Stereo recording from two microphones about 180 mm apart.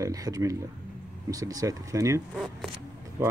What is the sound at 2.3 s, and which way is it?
Speech, centre (ahead or behind).